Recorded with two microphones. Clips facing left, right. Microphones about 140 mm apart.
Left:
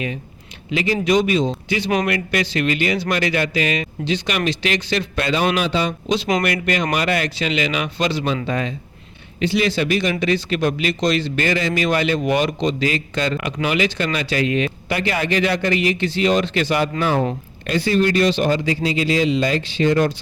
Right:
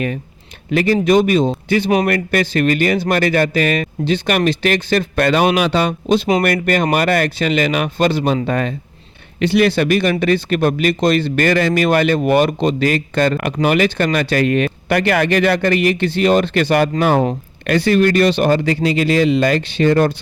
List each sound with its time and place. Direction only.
0.7 s speech: 55° right (ahead or behind)